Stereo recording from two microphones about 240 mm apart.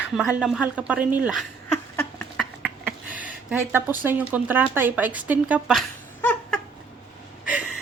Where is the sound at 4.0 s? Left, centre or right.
Centre.